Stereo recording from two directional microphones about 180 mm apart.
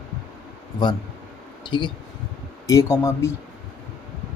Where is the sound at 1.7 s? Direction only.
25° left (ahead or behind).